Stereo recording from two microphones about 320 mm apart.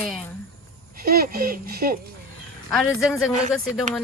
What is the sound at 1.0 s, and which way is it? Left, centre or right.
Speech, right.